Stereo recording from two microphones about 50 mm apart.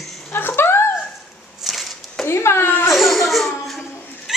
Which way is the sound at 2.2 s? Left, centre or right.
Left.